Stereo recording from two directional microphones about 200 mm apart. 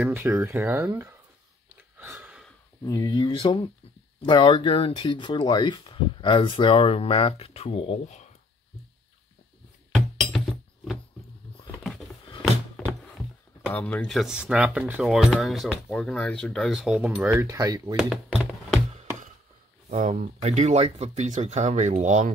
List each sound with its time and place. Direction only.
0.0 s speech: 10° right (ahead or behind)
2.0 s a sound: 10° right (ahead or behind)
2.8 s speech: 20° left (ahead or behind)
9.9 s music: centre (ahead or behind)
11.8 s a sound: centre (ahead or behind)
13.7 s speech: 10° left (ahead or behind)
17.3 s speech: 15° right (ahead or behind)
17.9 s music: centre (ahead or behind)
19.9 s speech: 35° right (ahead or behind)